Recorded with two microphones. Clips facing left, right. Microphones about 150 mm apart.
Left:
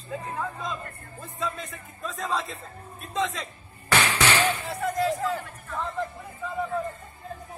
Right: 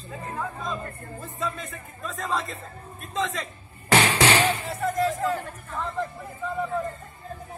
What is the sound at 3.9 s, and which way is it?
Music, 30° right (ahead or behind).